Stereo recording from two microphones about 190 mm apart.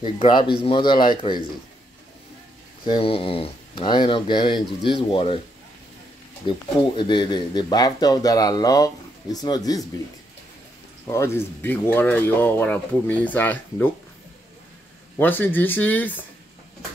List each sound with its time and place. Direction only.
0.0 s speech: 25° left (ahead or behind)
2.8 s speech: 25° left (ahead or behind)
6.4 s speech: 25° left (ahead or behind)
11.1 s speech: 15° left (ahead or behind)
15.1 s speech: 10° left (ahead or behind)